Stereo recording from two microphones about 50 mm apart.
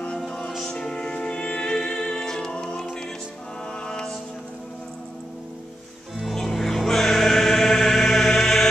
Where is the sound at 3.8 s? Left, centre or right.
Centre.